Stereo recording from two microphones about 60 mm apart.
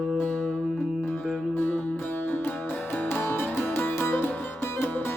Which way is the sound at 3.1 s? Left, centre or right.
Left.